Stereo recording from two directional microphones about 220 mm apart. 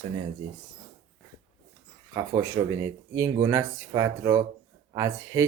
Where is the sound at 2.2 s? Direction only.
15° right (ahead or behind).